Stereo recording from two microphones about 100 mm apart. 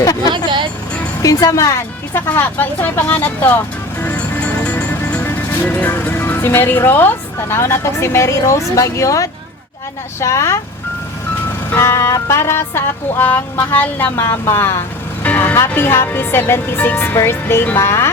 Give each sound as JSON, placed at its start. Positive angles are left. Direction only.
{"t": 0.0, "sound": "vehicle", "side_deg": 35}
{"t": 1.2, "sound": "music", "side_deg": 35}
{"t": 4.6, "sound": "music", "side_deg": 10}
{"t": 5.2, "sound": "speech", "side_deg": 20}
{"t": 10.2, "sound": "music", "side_deg": 30}
{"t": 11.7, "sound": "music", "side_deg": 25}